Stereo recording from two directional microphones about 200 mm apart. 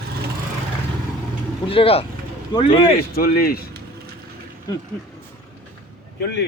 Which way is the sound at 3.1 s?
50° left (ahead or behind).